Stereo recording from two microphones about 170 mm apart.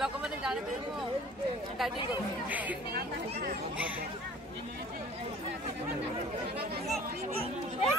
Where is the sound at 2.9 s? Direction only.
65° right (ahead or behind).